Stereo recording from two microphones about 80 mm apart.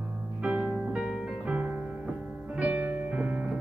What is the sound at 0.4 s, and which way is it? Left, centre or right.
Music, centre.